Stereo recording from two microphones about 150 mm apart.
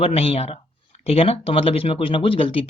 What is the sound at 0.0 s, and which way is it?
Speech, 40° left (ahead or behind).